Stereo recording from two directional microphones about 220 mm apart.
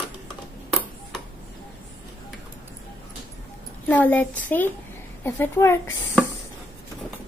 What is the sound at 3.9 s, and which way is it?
Speech, 10° left (ahead or behind).